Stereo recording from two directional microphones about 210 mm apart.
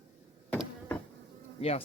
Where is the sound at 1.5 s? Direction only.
30° left (ahead or behind).